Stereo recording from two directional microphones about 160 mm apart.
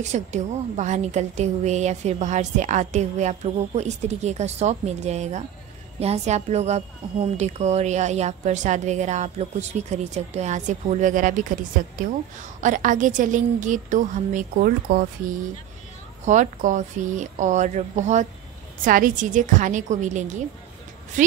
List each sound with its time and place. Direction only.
0.0 s a woman's voice: 45° right (ahead or behind)
12.5 s a woman's voice: 50° right (ahead or behind)
18.9 s a woman's voice: 60° right (ahead or behind)